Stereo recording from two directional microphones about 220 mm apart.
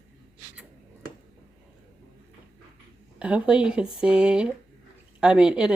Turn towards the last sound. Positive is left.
turn(degrees=-5)  # may be behind; listen again after turning